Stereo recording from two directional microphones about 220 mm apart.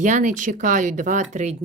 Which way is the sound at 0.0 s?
35° right (ahead or behind).